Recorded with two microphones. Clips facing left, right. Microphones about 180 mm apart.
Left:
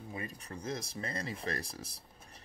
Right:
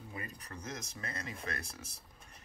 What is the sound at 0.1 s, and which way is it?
Speech, 25° left (ahead or behind).